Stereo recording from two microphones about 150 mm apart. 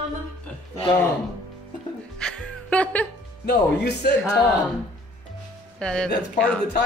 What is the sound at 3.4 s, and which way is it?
Speech, 90° left.